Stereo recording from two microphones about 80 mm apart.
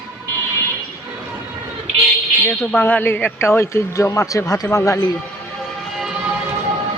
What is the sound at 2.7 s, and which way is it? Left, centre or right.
A man's voice, left.